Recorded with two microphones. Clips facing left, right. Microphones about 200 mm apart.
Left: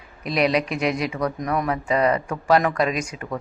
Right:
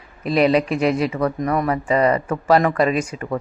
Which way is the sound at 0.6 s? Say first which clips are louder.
Right 5 dB; 35° right (ahead or behind).